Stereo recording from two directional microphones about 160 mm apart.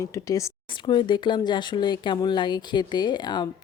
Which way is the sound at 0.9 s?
30° left (ahead or behind).